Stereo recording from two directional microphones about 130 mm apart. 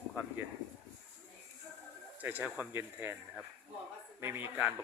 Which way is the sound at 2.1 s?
15° right (ahead or behind).